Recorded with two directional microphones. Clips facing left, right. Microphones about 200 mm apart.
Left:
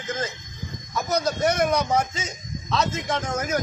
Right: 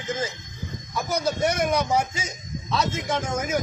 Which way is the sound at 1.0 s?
5° right (ahead or behind).